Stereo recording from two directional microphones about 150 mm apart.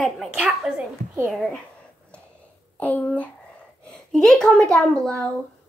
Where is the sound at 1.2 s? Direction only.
Centre (ahead or behind).